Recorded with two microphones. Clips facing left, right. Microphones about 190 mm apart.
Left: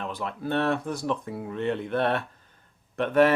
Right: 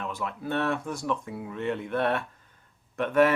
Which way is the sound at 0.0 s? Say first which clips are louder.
Left 1 dB; 35° left (ahead or behind).